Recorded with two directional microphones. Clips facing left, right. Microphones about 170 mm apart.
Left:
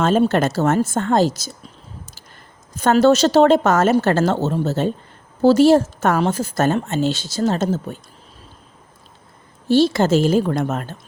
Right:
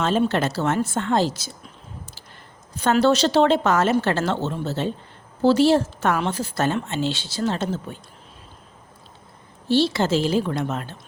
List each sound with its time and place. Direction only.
0.0 s a woman's voice: 45° left (ahead or behind)
2.7 s a woman's voice: 45° left (ahead or behind)
9.6 s a woman's voice: 45° left (ahead or behind)